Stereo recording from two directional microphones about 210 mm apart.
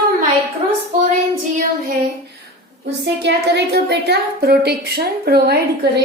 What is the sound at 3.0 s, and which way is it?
A woman's voice, 55° right (ahead or behind).